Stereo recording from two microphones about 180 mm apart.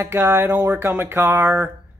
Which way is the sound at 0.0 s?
15° right (ahead or behind).